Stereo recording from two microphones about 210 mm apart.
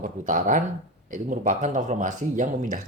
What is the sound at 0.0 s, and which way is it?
Speech, 40° right (ahead or behind).